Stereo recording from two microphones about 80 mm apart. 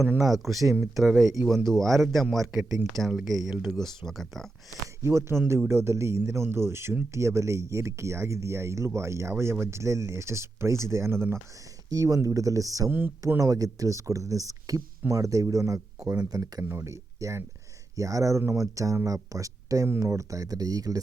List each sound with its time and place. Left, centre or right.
0.3 s a man's voice: centre
1.2 s speech: right
1.5 s a man's voice: centre
5.0 s speech: right
11.9 s speech: right
12.9 s speech: right
13.4 s speech: right
16.6 s speech: right